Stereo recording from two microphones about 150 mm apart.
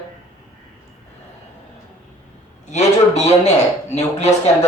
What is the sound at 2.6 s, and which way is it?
A man's voice, 50° left (ahead or behind).